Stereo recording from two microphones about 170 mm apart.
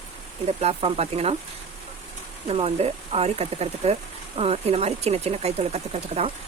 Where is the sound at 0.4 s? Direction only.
35° right (ahead or behind).